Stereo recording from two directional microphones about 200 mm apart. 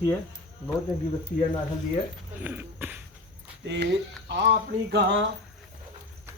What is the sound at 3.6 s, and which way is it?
Speech, 60° right (ahead or behind).